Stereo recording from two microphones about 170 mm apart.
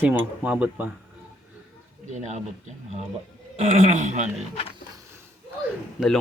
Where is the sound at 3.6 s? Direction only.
45° right (ahead or behind).